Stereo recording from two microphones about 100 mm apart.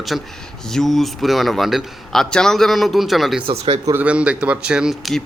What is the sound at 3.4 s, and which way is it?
Speech, 90° right.